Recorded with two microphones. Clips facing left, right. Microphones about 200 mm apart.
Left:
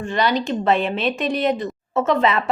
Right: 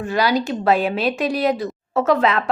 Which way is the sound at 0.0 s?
5° right (ahead or behind).